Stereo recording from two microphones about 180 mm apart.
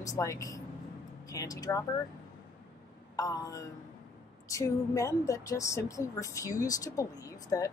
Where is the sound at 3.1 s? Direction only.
20° left (ahead or behind).